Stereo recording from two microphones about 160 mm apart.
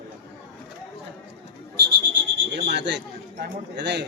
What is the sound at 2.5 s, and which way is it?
Speech, 90° right.